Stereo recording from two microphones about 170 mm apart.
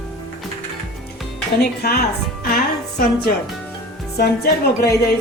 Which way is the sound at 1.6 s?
65° left (ahead or behind).